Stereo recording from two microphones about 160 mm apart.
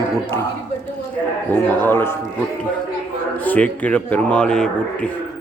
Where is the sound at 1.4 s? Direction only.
10° left (ahead or behind).